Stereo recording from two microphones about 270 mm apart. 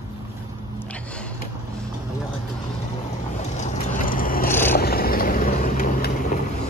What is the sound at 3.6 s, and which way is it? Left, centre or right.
Vehicle, left.